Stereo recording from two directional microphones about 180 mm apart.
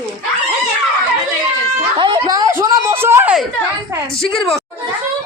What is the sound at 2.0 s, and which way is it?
Speech, 25° right (ahead or behind).